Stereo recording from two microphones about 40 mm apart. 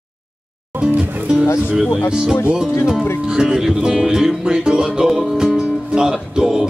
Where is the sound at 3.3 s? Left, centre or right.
Centre.